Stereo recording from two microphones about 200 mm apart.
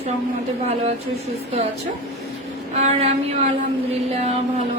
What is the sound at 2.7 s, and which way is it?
Female singing, 30° right (ahead or behind).